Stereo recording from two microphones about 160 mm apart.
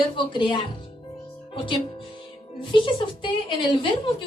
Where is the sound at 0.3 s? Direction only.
30° left (ahead or behind).